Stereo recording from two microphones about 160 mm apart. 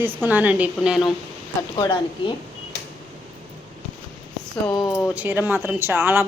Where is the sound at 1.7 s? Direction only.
30° left (ahead or behind).